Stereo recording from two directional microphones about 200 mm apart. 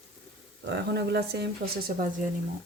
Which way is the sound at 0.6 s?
60° right (ahead or behind).